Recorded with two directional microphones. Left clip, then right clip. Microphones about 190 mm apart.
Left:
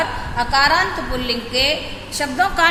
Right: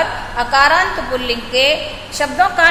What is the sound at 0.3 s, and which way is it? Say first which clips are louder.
A woman's voice: right 4 dB; 15° left (ahead or behind).